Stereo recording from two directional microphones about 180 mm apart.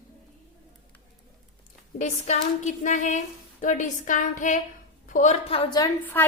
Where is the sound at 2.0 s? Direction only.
40° left (ahead or behind).